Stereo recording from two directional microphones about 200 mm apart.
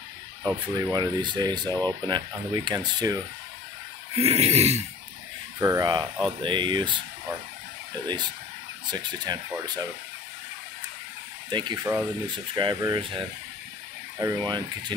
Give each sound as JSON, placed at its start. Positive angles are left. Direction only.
{"t": 0.4, "sound": "speech", "side_deg": -15}
{"t": 4.1, "sound": "a sound", "side_deg": -30}
{"t": 5.6, "sound": "speech", "side_deg": -20}
{"t": 8.9, "sound": "speech", "side_deg": -20}
{"t": 11.5, "sound": "speech", "side_deg": -20}